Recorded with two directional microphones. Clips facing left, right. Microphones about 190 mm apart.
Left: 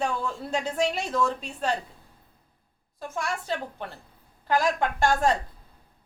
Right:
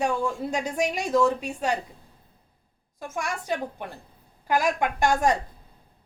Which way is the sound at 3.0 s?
15° right (ahead or behind).